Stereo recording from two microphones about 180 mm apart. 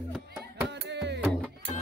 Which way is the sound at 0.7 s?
75° right (ahead or behind).